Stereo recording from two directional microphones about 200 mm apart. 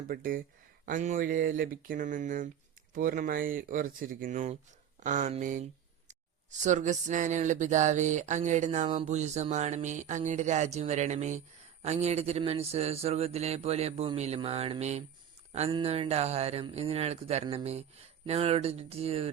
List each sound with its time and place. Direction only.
0.1 s speech: 45° right (ahead or behind); by 19.3 s 30° right (ahead or behind)